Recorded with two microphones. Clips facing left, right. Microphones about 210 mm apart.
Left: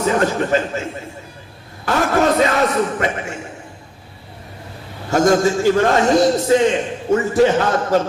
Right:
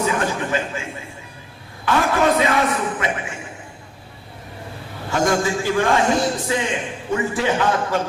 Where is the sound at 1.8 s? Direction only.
40° left (ahead or behind).